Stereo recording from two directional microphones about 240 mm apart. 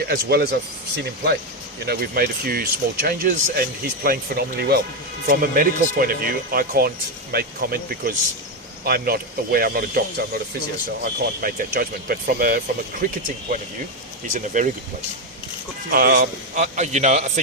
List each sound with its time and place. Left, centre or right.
0.1 s speech: right
14.3 s speech: right
15.9 s a man's voice: right